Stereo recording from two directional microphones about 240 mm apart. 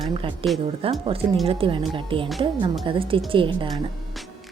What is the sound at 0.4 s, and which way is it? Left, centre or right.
Speech, centre.